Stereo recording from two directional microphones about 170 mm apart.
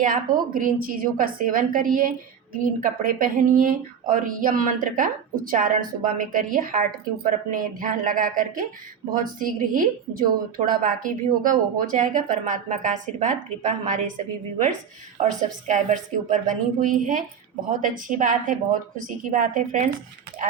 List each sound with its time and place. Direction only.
0.0 s a woman's voice: 55° right (ahead or behind)
15.2 s speech: 45° right (ahead or behind)